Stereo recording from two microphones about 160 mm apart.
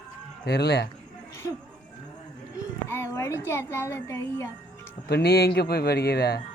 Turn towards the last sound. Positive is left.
turn(degrees=80)